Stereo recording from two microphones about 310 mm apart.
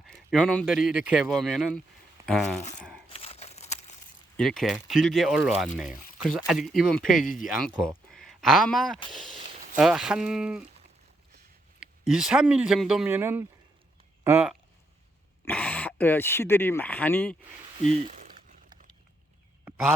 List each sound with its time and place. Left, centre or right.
0.0 s speech: centre
2.7 s tearing: centre
3.1 s crumpling: centre
4.4 s speech: centre
11.8 s speech: centre
17.9 s a sound: right